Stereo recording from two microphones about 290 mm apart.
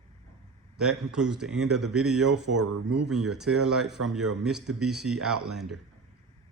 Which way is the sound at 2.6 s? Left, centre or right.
Right.